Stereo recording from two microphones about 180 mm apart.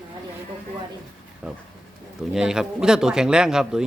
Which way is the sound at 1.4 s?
5° right (ahead or behind).